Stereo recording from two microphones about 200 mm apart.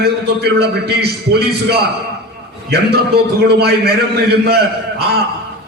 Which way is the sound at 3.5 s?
55° right (ahead or behind).